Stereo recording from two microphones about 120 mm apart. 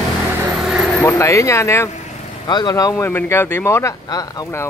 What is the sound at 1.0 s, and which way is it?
Speech, 25° left (ahead or behind).